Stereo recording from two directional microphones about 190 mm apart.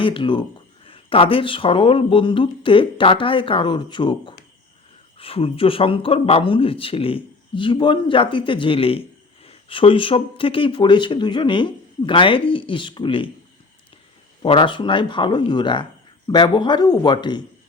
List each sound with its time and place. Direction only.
0.0 s speech: 25° left (ahead or behind)
14.4 s speech: 25° left (ahead or behind)